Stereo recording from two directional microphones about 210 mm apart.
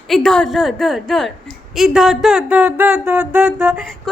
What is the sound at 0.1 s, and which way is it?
A woman's voice, 5° left (ahead or behind).